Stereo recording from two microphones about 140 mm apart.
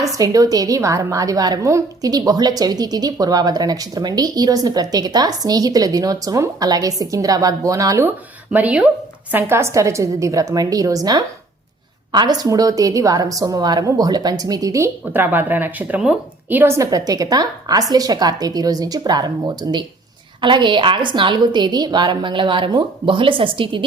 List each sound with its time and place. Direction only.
0.1 s a woman's voice: 25° right (ahead or behind)
8.5 s a woman's voice: 10° right (ahead or behind); by 23.8 s 35° right (ahead or behind)